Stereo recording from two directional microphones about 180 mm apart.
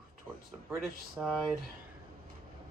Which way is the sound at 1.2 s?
5° right (ahead or behind).